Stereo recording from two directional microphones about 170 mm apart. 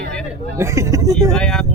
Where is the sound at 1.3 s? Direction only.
Centre (ahead or behind).